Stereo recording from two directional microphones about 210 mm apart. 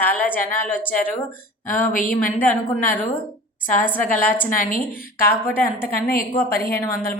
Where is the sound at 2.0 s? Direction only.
10° left (ahead or behind).